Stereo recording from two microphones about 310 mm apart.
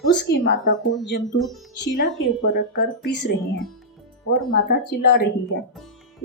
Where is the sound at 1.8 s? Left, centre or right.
Left.